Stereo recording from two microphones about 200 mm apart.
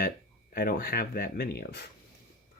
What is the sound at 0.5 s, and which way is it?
Speech, 50° left (ahead or behind).